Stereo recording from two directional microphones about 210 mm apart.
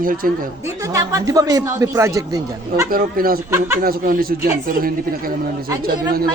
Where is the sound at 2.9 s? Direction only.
45° right (ahead or behind).